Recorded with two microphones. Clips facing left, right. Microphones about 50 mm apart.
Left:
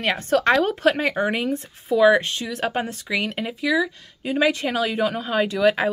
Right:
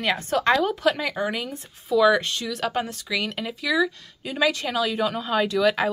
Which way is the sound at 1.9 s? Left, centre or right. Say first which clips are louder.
Left 2 dB; left.